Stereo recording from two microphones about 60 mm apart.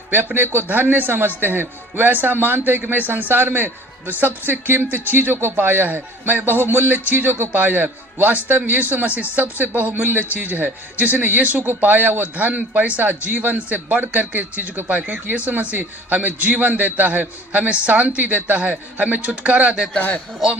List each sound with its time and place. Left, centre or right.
0.3 s a man's voice: right
20.0 s a man's voice: left